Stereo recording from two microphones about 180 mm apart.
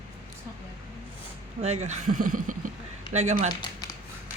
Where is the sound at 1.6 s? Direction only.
40° right (ahead or behind).